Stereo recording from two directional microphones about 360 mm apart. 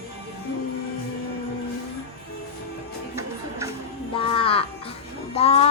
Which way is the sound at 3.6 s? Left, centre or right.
Centre.